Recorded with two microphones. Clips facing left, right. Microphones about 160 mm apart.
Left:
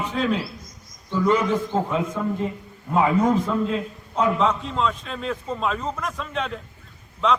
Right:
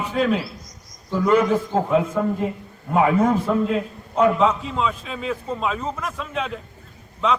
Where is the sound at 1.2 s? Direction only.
55° right (ahead or behind).